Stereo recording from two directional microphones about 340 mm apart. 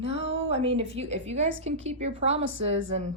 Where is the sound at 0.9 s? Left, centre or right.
Centre.